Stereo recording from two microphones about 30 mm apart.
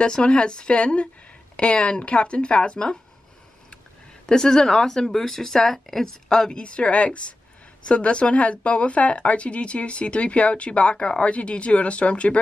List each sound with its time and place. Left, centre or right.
0.0 s speech: left
4.3 s a woman's voice: left
6.5 s a woman's voice: left